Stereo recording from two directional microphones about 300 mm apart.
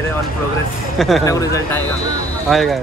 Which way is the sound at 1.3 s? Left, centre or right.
Centre.